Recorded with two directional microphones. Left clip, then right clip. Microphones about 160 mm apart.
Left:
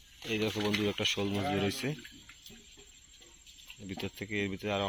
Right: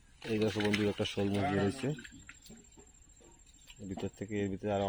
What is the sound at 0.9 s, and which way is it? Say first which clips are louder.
Speech: left 3 dB; 25° right (ahead or behind).